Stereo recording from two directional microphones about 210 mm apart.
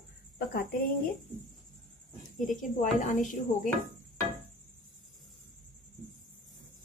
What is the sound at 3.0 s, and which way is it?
Speech, 35° left (ahead or behind).